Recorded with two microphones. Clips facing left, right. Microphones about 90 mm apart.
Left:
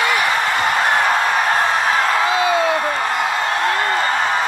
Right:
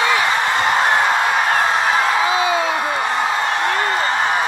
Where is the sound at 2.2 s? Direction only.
15° right (ahead or behind).